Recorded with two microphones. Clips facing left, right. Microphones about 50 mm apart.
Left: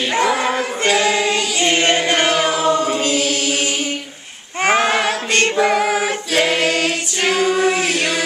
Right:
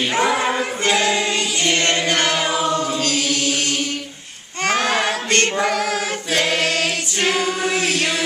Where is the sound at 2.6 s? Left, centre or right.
Centre.